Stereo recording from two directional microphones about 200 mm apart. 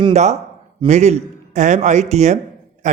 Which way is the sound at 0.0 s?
35° right (ahead or behind).